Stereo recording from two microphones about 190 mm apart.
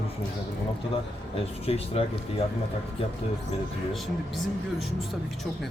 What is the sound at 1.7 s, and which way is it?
Speech, 30° left (ahead or behind).